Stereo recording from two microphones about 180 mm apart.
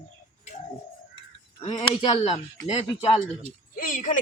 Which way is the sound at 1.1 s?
30° left (ahead or behind).